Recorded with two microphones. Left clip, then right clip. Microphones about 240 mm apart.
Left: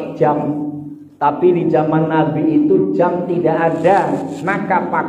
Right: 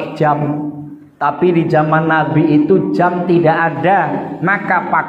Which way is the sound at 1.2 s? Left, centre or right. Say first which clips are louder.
Even; right.